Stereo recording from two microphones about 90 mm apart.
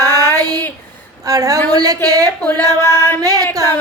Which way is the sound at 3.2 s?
45° right (ahead or behind).